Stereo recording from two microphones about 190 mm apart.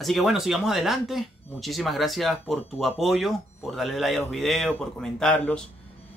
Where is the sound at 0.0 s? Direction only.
Centre (ahead or behind).